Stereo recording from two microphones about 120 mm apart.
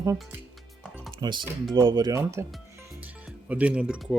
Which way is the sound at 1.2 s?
40° right (ahead or behind).